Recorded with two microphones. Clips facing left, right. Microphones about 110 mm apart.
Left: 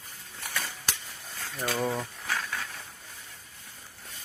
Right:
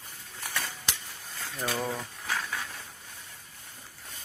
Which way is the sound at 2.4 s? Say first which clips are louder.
Even; 5° right (ahead or behind).